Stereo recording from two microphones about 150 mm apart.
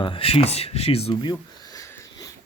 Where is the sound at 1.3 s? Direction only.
25° left (ahead or behind).